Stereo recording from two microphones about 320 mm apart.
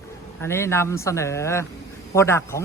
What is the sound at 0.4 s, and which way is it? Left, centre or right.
A man's voice, centre.